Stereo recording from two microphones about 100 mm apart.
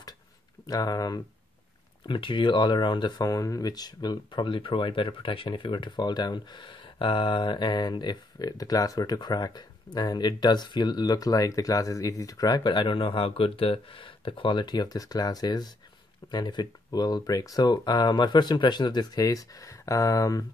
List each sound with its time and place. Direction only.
0.7 s speech: 40° left (ahead or behind)
2.0 s speech: 55° left (ahead or behind); by 20.4 s 35° left (ahead or behind)